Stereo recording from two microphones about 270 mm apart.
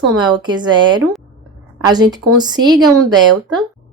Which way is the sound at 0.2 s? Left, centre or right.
Centre.